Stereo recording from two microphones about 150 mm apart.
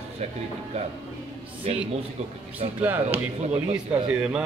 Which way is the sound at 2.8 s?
15° right (ahead or behind).